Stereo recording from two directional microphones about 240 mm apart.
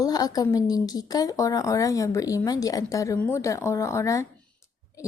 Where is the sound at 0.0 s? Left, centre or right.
Centre.